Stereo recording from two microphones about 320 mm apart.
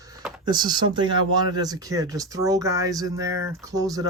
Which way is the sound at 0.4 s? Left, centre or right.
Centre.